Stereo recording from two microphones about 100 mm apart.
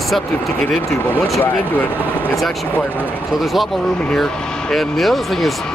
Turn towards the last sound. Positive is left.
turn(degrees=0)  # may be behind; listen again after turning